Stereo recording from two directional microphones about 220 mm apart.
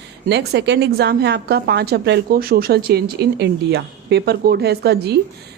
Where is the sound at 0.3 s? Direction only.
50° right (ahead or behind).